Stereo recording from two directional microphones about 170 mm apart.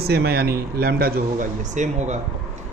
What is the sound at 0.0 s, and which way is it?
Speech, 70° right (ahead or behind).